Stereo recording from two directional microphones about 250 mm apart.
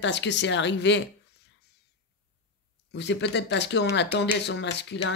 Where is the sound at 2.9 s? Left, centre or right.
Left.